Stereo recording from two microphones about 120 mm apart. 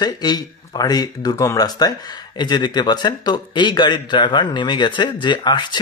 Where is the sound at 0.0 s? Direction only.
35° left (ahead or behind).